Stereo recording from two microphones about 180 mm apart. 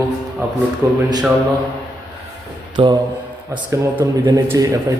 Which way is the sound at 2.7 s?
25° right (ahead or behind).